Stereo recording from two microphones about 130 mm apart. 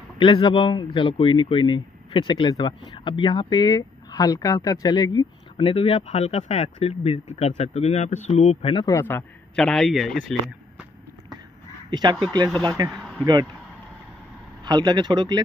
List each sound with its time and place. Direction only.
0.2 s speech: 40° left (ahead or behind)
5.6 s speech: 45° left (ahead or behind)
5.9 s speech: 60° left (ahead or behind)
8.6 s speech: 40° left (ahead or behind)
8.9 s a man's voice: 20° left (ahead or behind)
9.6 s speech: centre (ahead or behind)
11.9 s speech: 35° right (ahead or behind)
14.6 s speech: 30° right (ahead or behind)